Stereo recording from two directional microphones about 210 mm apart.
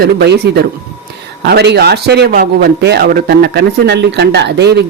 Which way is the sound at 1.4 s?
50° right (ahead or behind).